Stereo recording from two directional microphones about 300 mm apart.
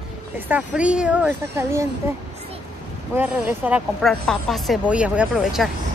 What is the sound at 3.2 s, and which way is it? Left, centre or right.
Speech, centre.